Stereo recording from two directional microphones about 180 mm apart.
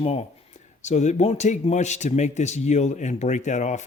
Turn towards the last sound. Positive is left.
turn(degrees=40)  # may be behind; listen again after turning